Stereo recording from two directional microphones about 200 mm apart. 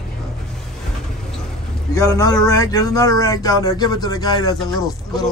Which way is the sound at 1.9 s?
15° left (ahead or behind).